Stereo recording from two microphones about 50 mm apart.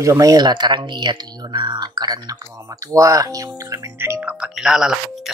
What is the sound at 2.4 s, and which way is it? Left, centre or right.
Speech, right.